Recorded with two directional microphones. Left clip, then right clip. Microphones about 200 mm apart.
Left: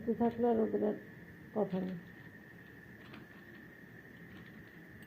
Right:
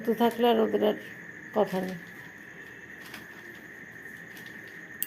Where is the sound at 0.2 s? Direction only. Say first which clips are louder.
Right 9 dB; 40° right (ahead or behind).